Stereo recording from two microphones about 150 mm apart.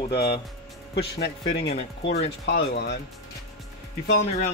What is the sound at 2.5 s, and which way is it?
Speech, 90° left.